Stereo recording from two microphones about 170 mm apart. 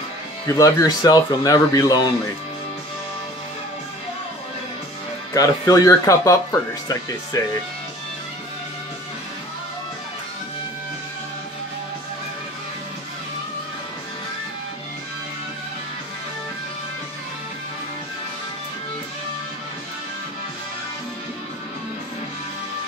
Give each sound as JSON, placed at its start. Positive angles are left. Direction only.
{"t": 0.5, "sound": "speech", "side_deg": 20}
{"t": 5.3, "sound": "speech", "side_deg": 20}